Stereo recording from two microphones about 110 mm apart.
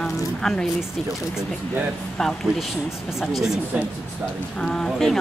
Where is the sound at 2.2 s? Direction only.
5° left (ahead or behind).